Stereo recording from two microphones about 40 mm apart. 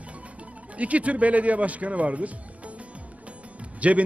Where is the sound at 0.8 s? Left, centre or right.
Right.